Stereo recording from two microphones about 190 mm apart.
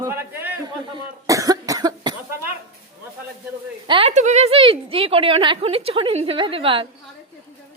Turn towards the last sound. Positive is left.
turn(degrees=-30)  # may be behind; listen again after turning